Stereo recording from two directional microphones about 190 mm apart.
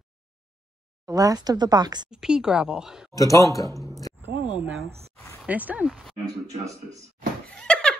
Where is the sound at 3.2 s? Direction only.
15° left (ahead or behind).